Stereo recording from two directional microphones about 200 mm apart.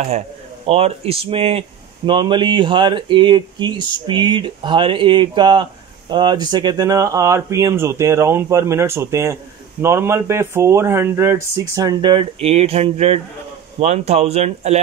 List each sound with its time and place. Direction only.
0.7 s speech: 30° right (ahead or behind)